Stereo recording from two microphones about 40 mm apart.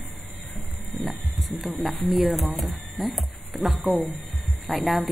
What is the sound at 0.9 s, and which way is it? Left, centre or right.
A man's voice, centre.